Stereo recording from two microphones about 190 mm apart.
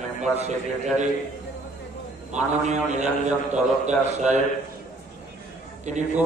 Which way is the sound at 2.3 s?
40° right (ahead or behind).